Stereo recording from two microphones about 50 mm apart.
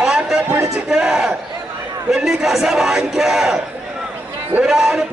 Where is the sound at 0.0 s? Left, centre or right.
Centre.